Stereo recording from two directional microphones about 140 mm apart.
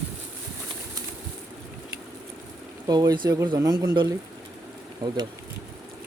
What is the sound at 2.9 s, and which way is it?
Speech, 30° right (ahead or behind).